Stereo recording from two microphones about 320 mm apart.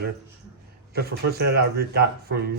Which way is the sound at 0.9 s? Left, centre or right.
Right.